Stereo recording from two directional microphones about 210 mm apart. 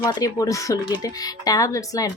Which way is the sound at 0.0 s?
15° left (ahead or behind).